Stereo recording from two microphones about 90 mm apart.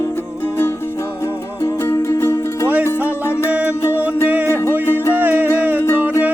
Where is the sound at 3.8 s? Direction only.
25° left (ahead or behind).